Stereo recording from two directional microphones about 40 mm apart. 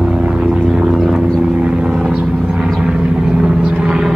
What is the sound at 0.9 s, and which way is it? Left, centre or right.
Vehicle, centre.